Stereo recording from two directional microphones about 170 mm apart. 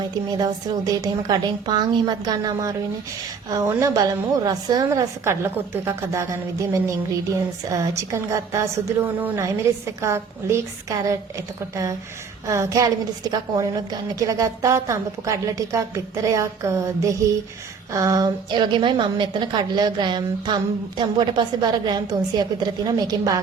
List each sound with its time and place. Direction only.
0.0 s a woman's voice: 25° right (ahead or behind)